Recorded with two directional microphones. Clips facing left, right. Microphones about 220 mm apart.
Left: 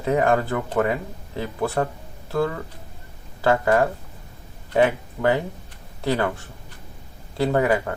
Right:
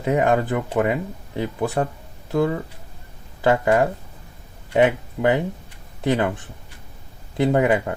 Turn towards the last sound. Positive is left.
turn(degrees=-20)  # may be behind; listen again after turning